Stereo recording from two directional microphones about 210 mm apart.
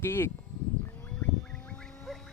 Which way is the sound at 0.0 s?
10° left (ahead or behind).